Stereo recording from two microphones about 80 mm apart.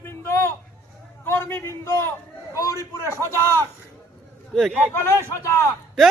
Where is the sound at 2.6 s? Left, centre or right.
Left.